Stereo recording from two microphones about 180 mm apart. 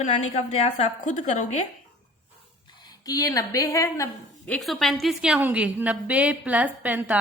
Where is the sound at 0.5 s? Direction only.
40° left (ahead or behind).